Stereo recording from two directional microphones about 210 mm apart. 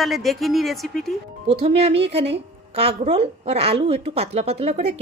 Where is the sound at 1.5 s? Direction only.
30° right (ahead or behind).